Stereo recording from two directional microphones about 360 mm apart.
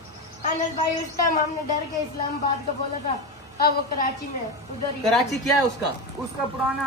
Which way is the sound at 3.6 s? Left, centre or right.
Left.